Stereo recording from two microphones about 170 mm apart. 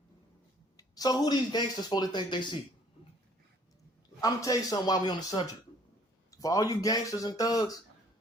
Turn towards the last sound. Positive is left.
turn(degrees=20)  # may be behind; listen again after turning